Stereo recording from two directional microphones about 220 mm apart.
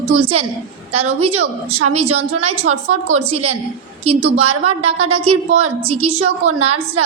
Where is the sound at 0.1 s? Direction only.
25° right (ahead or behind).